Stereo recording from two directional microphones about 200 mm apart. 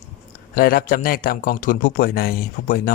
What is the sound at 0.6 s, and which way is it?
A man's voice, 45° left (ahead or behind).